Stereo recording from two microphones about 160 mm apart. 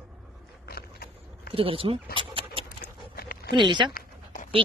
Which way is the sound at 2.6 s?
70° left (ahead or behind).